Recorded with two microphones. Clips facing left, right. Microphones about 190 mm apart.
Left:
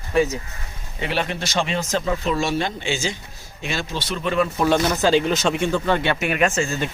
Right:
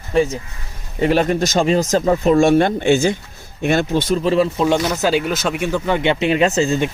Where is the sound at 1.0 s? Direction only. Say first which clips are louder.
Right 9 dB; 45° right (ahead or behind).